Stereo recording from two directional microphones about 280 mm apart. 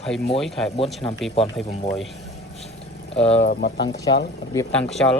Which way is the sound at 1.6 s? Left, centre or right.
Left.